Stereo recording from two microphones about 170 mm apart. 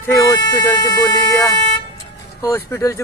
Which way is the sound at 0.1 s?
15° left (ahead or behind).